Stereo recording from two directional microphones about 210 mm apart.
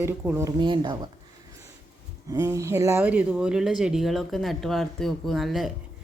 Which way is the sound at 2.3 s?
15° right (ahead or behind).